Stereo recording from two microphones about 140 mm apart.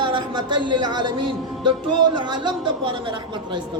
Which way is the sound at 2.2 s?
35° right (ahead or behind).